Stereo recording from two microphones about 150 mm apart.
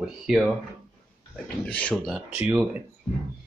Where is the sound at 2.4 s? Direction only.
10° right (ahead or behind).